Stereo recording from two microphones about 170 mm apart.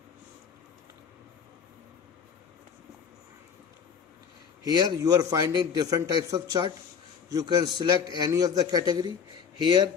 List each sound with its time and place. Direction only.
4.6 s a man's voice: 25° right (ahead or behind)